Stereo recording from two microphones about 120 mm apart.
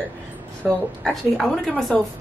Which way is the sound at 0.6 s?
20° right (ahead or behind).